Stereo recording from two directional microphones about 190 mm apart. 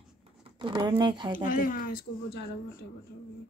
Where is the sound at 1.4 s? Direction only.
45° left (ahead or behind).